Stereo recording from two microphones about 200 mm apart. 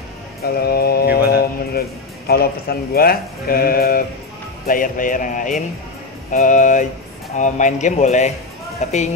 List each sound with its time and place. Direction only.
0.4 s music: 50° left (ahead or behind)
2.9 s speech: 50° left (ahead or behind)
4.6 s music: 45° left (ahead or behind)